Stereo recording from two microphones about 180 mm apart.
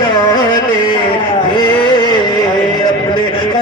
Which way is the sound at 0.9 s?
25° left (ahead or behind).